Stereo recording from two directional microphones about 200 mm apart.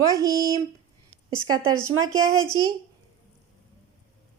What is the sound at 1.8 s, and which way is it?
Speech, 90° right.